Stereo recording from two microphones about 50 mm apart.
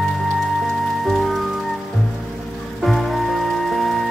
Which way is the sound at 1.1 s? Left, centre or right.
Centre.